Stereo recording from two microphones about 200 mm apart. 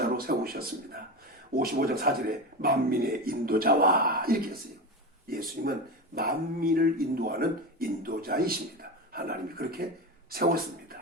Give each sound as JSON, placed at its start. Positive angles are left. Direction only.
{"t": 0.0, "sound": "a man's voice", "side_deg": -50}
{"t": 5.6, "sound": "speech", "side_deg": -50}